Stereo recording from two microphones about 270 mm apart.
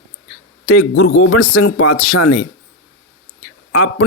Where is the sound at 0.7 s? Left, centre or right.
Left.